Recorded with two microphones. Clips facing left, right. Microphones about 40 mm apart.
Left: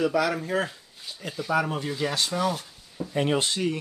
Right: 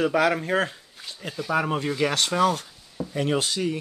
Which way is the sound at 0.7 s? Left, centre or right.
Right.